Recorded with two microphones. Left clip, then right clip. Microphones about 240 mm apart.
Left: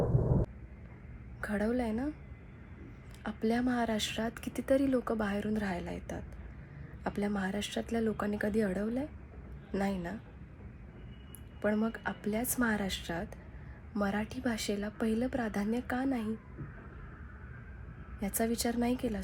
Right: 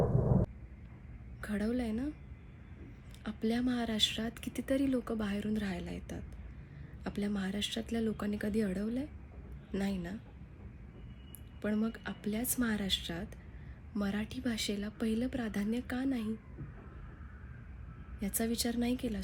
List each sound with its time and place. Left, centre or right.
0.0 s a sound: centre
1.4 s speech: centre
3.2 s speech: centre
11.6 s speech: centre
18.2 s speech: centre